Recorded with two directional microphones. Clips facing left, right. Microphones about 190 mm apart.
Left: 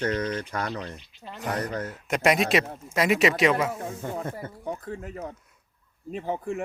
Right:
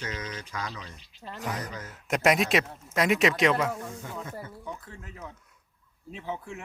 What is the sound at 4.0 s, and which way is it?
Speech, 55° left (ahead or behind).